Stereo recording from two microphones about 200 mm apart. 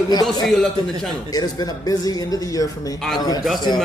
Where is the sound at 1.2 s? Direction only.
20° left (ahead or behind).